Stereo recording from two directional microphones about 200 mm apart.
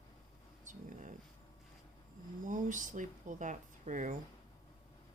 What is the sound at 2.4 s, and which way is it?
Speech, 40° right (ahead or behind).